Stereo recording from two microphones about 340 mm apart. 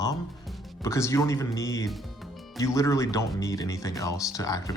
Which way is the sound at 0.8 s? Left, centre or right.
Centre.